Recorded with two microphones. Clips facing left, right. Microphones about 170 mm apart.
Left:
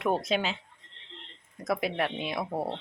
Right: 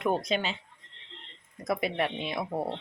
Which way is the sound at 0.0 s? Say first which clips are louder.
Left 1 dB; 5° left (ahead or behind).